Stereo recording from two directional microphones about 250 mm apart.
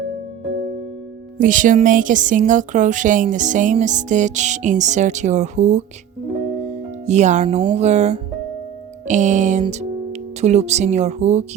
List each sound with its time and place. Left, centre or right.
1.4 s speech: right
7.0 s speech: right